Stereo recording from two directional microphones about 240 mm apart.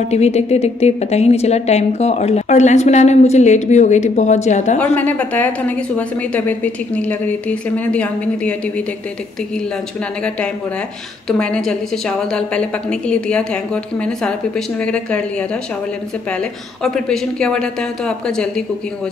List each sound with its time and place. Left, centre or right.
0.1 s a woman's voice: left
4.7 s a woman's voice: centre
11.2 s speech: centre
14.9 s speech: centre
16.8 s speech: centre